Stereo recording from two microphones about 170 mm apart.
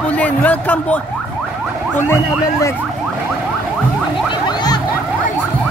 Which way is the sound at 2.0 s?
15° left (ahead or behind).